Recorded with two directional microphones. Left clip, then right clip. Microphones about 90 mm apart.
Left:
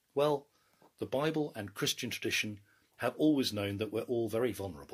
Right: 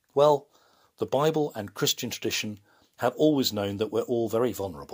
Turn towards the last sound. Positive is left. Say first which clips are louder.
# right 7 dB
turn(degrees=-60)  # may be behind; listen again after turning